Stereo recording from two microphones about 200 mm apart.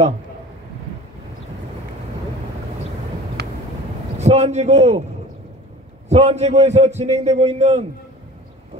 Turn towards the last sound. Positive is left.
turn(degrees=-35)  # may be behind; listen again after turning